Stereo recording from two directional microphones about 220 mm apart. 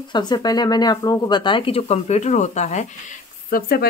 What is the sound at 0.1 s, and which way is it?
Speech, 20° left (ahead or behind).